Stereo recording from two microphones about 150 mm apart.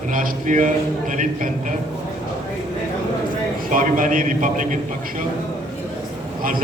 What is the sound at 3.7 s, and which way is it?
A man's voice, 65° right (ahead or behind).